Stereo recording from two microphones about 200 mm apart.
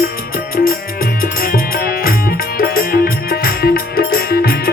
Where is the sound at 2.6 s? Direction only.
45° left (ahead or behind).